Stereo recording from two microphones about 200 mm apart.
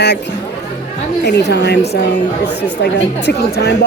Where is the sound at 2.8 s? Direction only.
55° left (ahead or behind).